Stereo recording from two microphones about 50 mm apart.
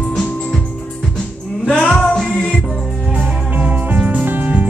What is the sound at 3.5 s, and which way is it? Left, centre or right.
Music, right.